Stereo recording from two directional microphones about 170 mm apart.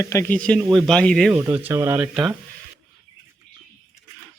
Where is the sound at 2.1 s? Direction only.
5° right (ahead or behind).